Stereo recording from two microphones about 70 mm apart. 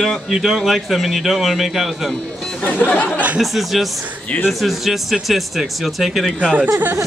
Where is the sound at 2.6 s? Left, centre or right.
Left.